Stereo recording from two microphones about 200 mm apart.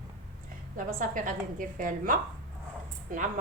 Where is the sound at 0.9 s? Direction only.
40° right (ahead or behind).